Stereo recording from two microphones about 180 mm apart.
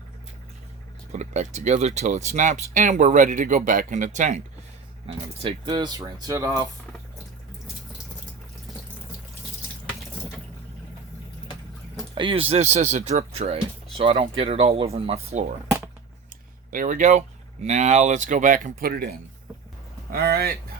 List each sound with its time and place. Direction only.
1.1 s speech: 40° right (ahead or behind)
5.0 s speech: 30° right (ahead or behind)
12.1 s speech: 30° right (ahead or behind)
16.7 s speech: 50° right (ahead or behind)
20.1 s speech: 60° right (ahead or behind)